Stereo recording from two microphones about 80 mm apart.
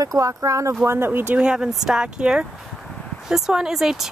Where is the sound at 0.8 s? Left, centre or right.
Right.